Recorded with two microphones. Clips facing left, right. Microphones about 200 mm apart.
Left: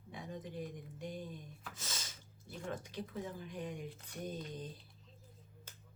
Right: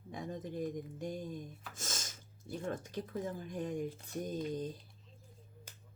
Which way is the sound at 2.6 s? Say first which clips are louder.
Right 2 dB; 45° right (ahead or behind).